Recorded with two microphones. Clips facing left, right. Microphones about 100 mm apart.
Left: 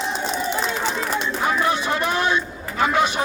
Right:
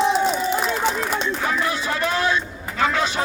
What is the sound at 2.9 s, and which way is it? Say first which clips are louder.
Speech: left 3 dB; 20° left (ahead or behind).